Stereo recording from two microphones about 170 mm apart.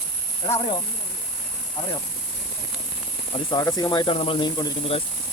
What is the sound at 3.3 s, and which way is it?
Speech, 25° left (ahead or behind).